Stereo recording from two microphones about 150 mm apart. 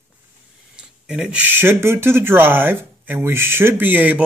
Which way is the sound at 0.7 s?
5° right (ahead or behind).